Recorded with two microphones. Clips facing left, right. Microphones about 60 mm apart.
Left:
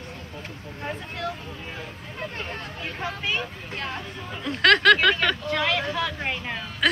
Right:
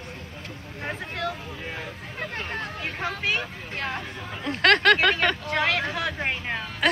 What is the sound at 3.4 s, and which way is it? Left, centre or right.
Speech, right.